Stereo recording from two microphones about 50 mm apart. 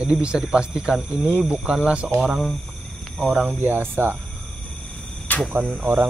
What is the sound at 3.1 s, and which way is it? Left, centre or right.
Speech, centre.